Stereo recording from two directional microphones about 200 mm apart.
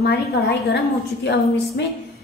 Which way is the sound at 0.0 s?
55° left (ahead or behind).